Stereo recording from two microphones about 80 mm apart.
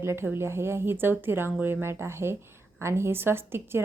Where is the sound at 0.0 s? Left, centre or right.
Right.